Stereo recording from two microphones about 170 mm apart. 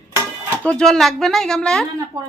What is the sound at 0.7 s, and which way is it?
A woman's voice, 5° left (ahead or behind).